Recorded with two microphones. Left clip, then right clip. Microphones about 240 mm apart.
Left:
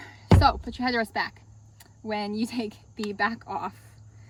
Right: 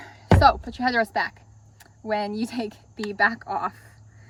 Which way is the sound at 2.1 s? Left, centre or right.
Centre.